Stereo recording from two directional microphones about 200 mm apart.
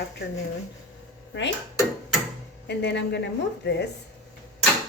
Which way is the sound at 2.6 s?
60° left (ahead or behind).